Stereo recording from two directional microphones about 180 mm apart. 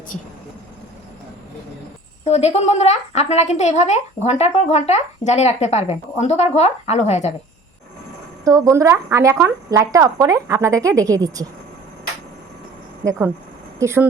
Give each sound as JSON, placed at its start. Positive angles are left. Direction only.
{"t": 2.2, "sound": "a woman's voice", "side_deg": 35}
{"t": 8.4, "sound": "speech", "side_deg": -20}
{"t": 13.1, "sound": "speech", "side_deg": -15}